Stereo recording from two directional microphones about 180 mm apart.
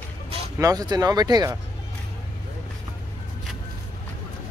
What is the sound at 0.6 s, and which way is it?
Speech, 20° right (ahead or behind).